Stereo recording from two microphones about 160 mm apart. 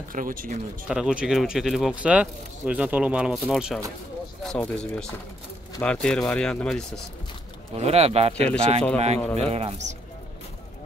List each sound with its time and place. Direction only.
0.1 s speech: 60° right (ahead or behind)
0.8 s speech: 5° right (ahead or behind)
7.7 s speech: 40° right (ahead or behind)